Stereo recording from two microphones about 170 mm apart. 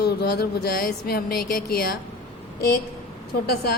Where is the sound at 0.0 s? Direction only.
70° left (ahead or behind).